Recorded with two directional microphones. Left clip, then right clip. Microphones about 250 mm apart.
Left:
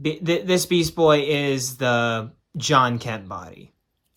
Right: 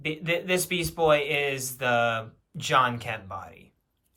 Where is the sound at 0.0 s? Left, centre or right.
Centre.